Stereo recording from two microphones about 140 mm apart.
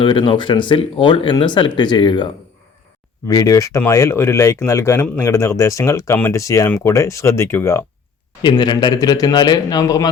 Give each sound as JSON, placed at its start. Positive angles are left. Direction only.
{"t": 0.0, "sound": "speech", "side_deg": 40}
{"t": 8.4, "sound": "speech", "side_deg": 30}